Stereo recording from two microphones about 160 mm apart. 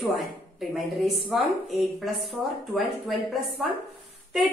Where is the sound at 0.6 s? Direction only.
Centre (ahead or behind).